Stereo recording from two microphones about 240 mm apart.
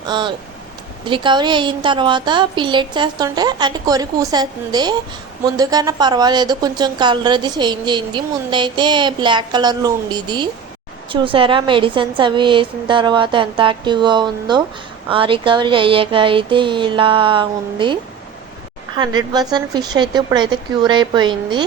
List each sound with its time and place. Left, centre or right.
0.0 s a woman's voice: centre
18.9 s speech: centre